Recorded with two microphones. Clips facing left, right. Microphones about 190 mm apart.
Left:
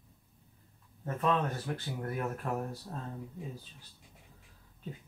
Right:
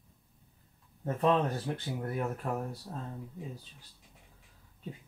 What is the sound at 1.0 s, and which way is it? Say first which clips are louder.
Speech: right 3 dB; 30° right (ahead or behind).